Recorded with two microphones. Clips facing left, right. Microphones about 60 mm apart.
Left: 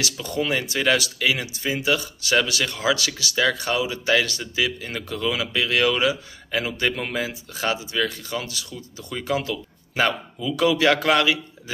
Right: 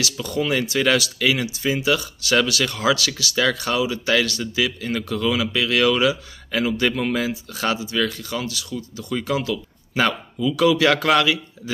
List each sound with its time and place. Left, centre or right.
0.0 s speech: left